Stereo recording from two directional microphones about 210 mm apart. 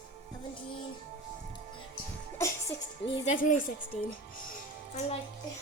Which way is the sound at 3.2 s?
40° left (ahead or behind).